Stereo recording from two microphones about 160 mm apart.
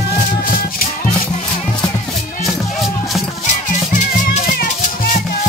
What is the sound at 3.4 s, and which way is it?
Music, 50° left (ahead or behind).